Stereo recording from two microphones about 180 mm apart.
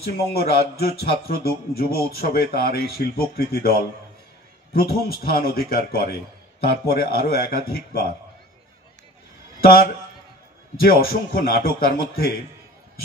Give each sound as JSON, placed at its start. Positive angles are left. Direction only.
{"t": 0.3, "sound": "a man's voice", "side_deg": 60}
{"t": 4.7, "sound": "a man's voice", "side_deg": 60}
{"t": 9.6, "sound": "a man's voice", "side_deg": 55}